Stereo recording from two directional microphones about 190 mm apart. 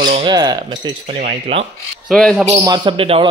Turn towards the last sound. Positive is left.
turn(degrees=-30)  # may be behind; listen again after turning